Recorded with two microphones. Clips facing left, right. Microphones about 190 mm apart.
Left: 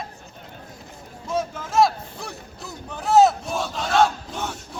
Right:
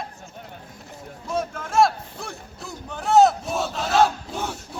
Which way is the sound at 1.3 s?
5° left (ahead or behind).